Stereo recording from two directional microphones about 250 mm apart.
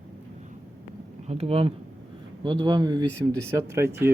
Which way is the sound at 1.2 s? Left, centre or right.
Right.